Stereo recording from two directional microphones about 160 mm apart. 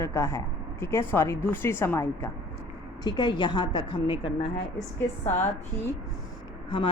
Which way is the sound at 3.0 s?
25° left (ahead or behind).